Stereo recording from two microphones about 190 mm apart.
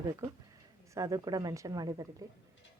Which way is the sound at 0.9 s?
15° right (ahead or behind).